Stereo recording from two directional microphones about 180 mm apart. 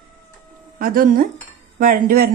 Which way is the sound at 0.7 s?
50° right (ahead or behind).